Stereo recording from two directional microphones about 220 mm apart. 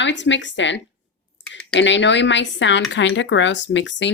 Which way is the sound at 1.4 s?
55° left (ahead or behind).